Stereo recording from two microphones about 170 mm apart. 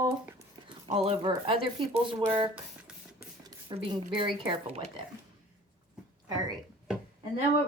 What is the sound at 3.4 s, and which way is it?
Speech, 30° right (ahead or behind).